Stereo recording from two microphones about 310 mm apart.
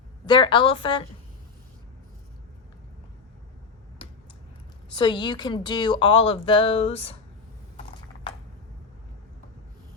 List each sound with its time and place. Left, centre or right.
0.3 s a woman's voice: centre
4.9 s a woman's voice: centre